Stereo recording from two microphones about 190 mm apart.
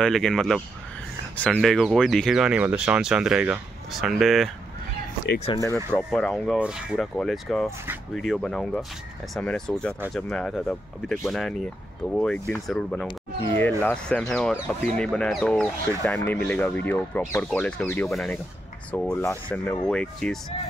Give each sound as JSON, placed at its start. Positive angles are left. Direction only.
{"t": 0.0, "sound": "speech", "side_deg": 0}
{"t": 5.5, "sound": "speech", "side_deg": 30}
{"t": 5.9, "sound": "speech", "side_deg": 5}